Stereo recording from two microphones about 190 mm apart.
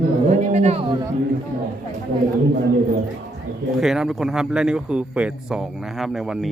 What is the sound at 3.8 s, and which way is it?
A man's voice, centre (ahead or behind).